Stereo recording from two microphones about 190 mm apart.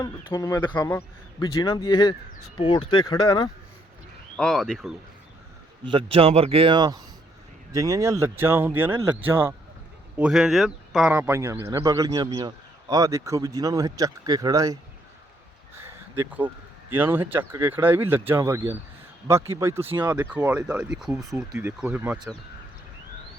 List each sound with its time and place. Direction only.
0.0 s a man's voice: 20° left (ahead or behind)
4.4 s speech: 5° left (ahead or behind)
5.8 s a man's voice: 25° right (ahead or behind)
15.8 s a sound: 10° right (ahead or behind)
16.9 s speech: 10° right (ahead or behind)